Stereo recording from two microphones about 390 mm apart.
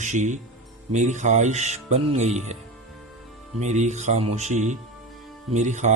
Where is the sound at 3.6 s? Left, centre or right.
Centre.